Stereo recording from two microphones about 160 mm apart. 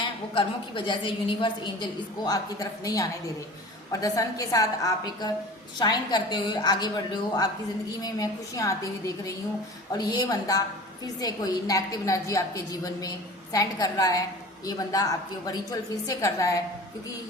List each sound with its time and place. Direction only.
0.0 s a woman's voice: 30° left (ahead or behind)